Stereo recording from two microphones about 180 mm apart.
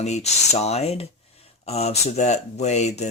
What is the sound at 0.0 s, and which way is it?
Speech, 40° left (ahead or behind).